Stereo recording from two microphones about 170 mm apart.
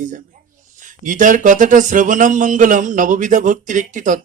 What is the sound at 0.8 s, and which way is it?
Speech, 50° right (ahead or behind).